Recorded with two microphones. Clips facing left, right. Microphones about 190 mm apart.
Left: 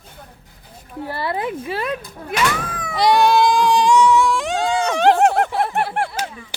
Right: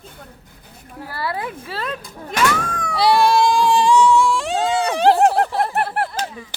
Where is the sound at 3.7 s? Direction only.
Centre (ahead or behind).